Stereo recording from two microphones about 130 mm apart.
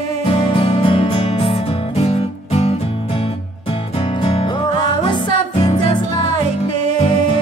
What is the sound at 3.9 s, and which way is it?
Music, 40° left (ahead or behind).